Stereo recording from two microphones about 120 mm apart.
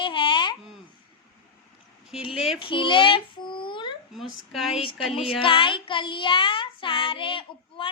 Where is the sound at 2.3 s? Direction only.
5° right (ahead or behind).